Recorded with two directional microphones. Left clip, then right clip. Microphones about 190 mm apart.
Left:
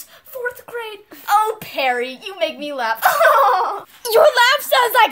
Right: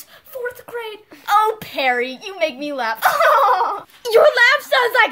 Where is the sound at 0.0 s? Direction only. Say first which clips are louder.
Left 1 dB; 15° right (ahead or behind).